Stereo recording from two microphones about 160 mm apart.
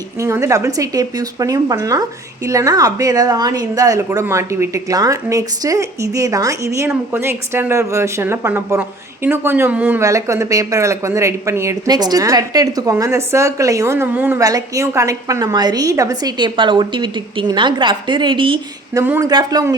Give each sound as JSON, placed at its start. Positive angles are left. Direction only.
{"t": 0.2, "sound": "a woman's voice", "side_deg": -20}
{"t": 18.9, "sound": "speech", "side_deg": -15}
{"t": 19.2, "sound": "a woman's voice", "side_deg": -25}